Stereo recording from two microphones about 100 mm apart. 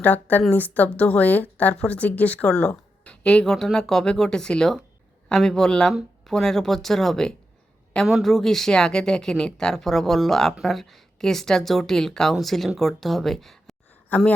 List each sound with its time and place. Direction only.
0.0 s a woman's voice: 15° left (ahead or behind)
14.1 s a woman's voice: 15° left (ahead or behind)